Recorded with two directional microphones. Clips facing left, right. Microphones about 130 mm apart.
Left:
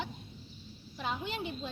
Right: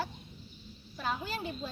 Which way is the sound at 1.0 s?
20° left (ahead or behind).